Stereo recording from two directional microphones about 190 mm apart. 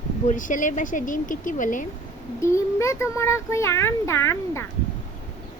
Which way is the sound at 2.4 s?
15° left (ahead or behind).